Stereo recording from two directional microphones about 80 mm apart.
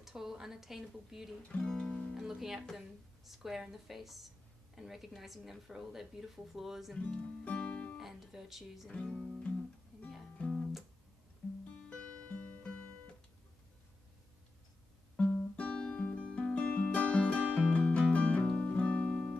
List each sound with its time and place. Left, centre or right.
0.0 s speech: centre
1.5 s music: centre
2.1 s speech: centre
7.1 s music: centre
8.0 s speech: centre
8.9 s music: centre
11.9 s music: centre
15.5 s music: centre